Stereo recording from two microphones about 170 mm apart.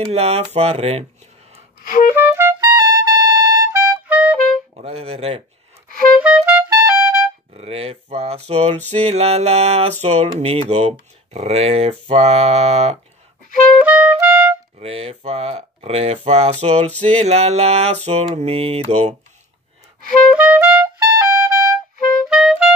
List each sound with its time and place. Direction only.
0.1 s mantra: 35° right (ahead or behind)
1.9 s music: 50° left (ahead or behind)
2.1 s music: 15° right (ahead or behind)
4.8 s mantra: 35° right (ahead or behind)
6.2 s music: 5° right (ahead or behind)
7.5 s mantra: 35° right (ahead or behind)
13.8 s music: 5° right (ahead or behind)
14.8 s mantra: 35° right (ahead or behind)
20.3 s music: 10° right (ahead or behind)
22.3 s clarinet: centre (ahead or behind)